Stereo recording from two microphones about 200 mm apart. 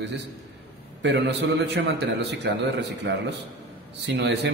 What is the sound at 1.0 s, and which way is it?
A man's voice, 60° right (ahead or behind).